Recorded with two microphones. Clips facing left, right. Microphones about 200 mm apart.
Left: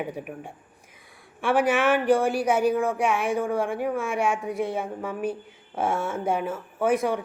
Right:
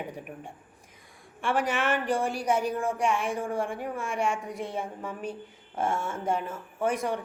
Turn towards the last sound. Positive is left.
turn(degrees=5)  # may be behind; listen again after turning